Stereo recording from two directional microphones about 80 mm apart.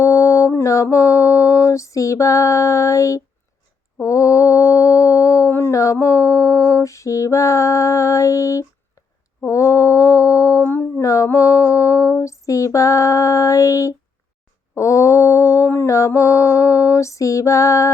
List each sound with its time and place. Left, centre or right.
0.0 s mantra: left
10.6 s a sound: left
11.0 s female singing: left
14.8 s mantra: left